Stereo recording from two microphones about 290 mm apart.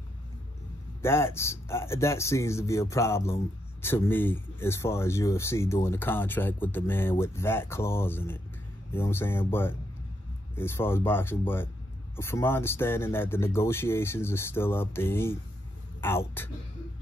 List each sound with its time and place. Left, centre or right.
1.0 s speech: centre